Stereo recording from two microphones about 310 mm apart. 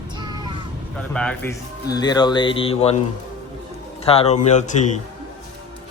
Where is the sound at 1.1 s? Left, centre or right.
Centre.